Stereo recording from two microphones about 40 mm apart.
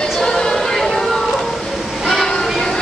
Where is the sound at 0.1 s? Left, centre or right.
Centre.